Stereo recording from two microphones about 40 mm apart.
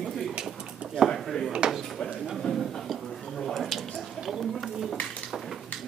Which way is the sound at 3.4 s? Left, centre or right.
Centre.